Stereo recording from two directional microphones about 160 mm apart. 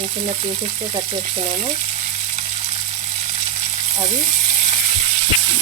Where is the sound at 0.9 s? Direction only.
35° right (ahead or behind).